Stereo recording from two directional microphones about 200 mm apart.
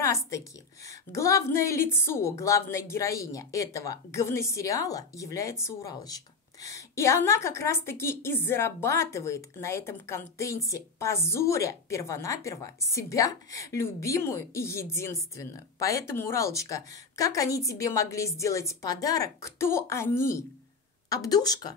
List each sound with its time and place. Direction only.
0.0 s a woman's voice: 15° left (ahead or behind)